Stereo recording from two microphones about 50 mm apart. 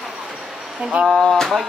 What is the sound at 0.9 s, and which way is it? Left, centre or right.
Speech, right.